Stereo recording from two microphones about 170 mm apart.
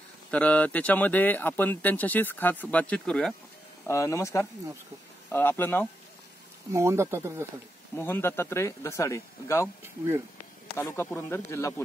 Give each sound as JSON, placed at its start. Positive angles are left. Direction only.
{"t": 0.3, "sound": "speech", "side_deg": 10}
{"t": 3.8, "sound": "speech", "side_deg": 15}
{"t": 6.7, "sound": "speech", "side_deg": -15}
{"t": 7.9, "sound": "speech", "side_deg": 10}
{"t": 10.8, "sound": "speech", "side_deg": 15}